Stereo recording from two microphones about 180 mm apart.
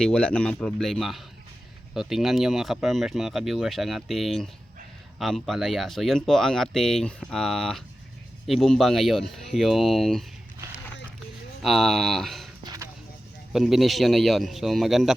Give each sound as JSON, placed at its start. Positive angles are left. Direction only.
{"t": 0.0, "sound": "speech", "side_deg": 5}
{"t": 11.6, "sound": "speech", "side_deg": 0}
{"t": 12.6, "sound": "a sound", "side_deg": -20}
{"t": 13.5, "sound": "speech", "side_deg": 0}